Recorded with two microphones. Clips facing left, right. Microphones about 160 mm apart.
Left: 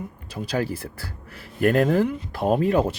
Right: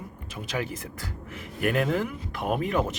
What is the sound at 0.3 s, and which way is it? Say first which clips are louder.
Speech: left 6 dB; 35° left (ahead or behind).